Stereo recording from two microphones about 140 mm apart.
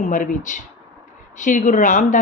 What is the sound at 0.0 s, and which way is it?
A woman's voice, 65° left (ahead or behind).